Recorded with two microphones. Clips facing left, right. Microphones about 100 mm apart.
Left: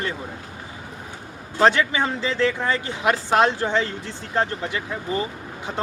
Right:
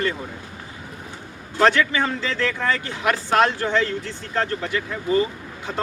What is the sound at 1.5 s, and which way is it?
A man's voice, 20° left (ahead or behind).